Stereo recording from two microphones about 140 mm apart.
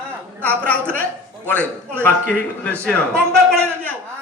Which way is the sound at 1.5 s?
10° left (ahead or behind).